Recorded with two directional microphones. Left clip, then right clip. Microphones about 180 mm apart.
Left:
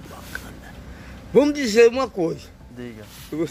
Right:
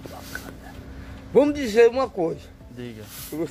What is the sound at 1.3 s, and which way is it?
A man's voice, 25° left (ahead or behind).